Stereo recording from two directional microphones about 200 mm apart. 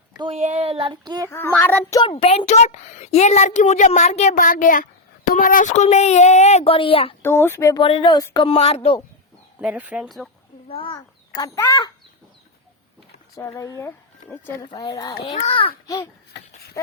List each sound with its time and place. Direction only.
0.2 s child singing: 30° right (ahead or behind)
1.3 s speech: 10° left (ahead or behind)
2.0 s a woman's voice: 25° left (ahead or behind)
7.2 s speech: 10° left (ahead or behind)
8.4 s speech: 30° left (ahead or behind)
9.6 s speech: 5° right (ahead or behind)
10.7 s a child's voice: 25° left (ahead or behind)
13.3 s speech: 15° left (ahead or behind)